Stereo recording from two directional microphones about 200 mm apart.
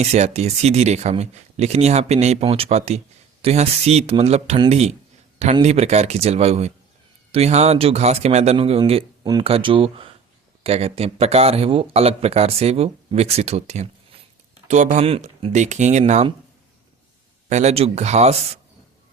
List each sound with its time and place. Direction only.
0.0 s speech: 35° right (ahead or behind)
14.9 s speech: 30° right (ahead or behind)
17.5 s speech: 35° right (ahead or behind)